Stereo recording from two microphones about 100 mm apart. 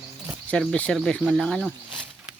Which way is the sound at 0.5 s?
10° left (ahead or behind).